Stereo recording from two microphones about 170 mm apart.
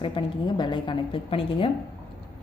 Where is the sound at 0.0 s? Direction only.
30° left (ahead or behind).